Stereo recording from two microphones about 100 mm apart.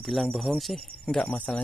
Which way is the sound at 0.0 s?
Centre (ahead or behind).